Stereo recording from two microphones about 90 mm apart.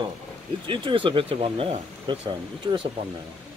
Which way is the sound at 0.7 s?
70° right (ahead or behind).